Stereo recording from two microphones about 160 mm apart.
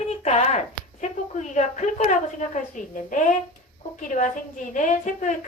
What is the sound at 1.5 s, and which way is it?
A woman's voice, 45° left (ahead or behind).